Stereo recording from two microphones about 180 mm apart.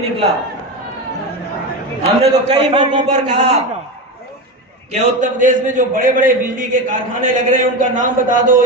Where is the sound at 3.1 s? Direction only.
40° right (ahead or behind).